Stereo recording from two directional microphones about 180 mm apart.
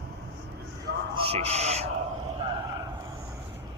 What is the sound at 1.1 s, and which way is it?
Speech, 35° right (ahead or behind).